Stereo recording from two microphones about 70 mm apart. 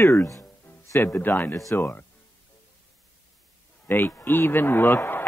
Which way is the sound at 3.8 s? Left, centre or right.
Left.